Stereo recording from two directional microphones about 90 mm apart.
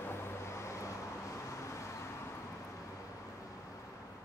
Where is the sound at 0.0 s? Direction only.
25° left (ahead or behind).